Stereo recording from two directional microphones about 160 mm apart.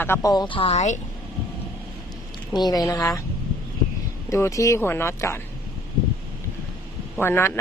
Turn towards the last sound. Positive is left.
turn(degrees=15)  # may be behind; listen again after turning